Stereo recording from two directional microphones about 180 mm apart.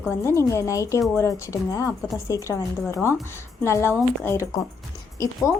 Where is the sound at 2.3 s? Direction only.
15° left (ahead or behind).